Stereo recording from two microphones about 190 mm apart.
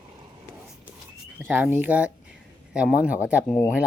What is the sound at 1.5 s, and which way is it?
Speech, 10° right (ahead or behind).